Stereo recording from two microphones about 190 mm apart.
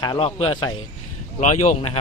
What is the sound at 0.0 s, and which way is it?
Speech, 25° left (ahead or behind).